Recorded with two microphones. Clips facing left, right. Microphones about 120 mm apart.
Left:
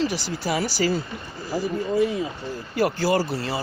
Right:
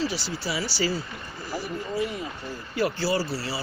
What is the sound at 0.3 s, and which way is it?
Speech, 45° left (ahead or behind).